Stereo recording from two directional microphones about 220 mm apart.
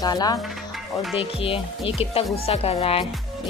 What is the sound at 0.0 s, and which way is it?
Speech, 15° left (ahead or behind).